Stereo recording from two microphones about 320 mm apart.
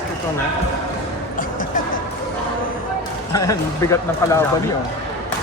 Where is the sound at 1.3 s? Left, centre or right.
Left.